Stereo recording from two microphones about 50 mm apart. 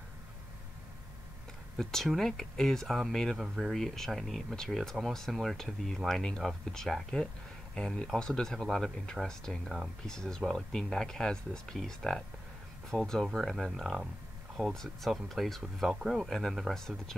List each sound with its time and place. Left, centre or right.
1.8 s speech: centre
15.9 s speech: centre
16.2 s speech: centre